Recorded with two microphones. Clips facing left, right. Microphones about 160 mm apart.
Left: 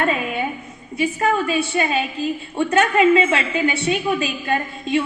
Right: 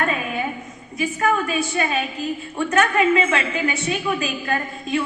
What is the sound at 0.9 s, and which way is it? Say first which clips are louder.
A woman's voice: left 2 dB; 30° left (ahead or behind).